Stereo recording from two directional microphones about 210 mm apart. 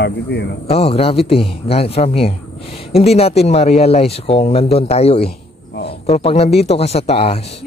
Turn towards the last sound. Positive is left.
turn(degrees=30)  # may be behind; listen again after turning